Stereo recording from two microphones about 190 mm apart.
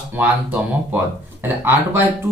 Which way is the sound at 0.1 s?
10° right (ahead or behind).